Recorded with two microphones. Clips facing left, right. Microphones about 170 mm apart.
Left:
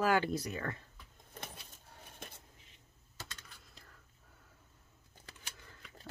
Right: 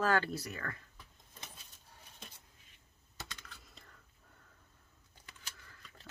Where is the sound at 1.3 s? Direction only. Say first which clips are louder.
Left 7 dB; 60° left (ahead or behind).